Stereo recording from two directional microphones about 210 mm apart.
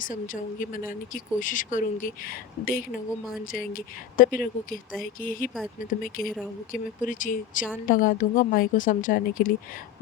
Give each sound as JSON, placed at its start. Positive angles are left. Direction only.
{"t": 0.0, "sound": "a woman's voice", "side_deg": 40}